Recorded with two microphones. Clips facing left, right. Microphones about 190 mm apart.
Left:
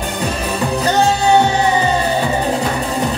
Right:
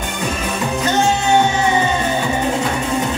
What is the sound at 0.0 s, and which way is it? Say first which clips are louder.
Music: left 2 dB; 35° left (ahead or behind).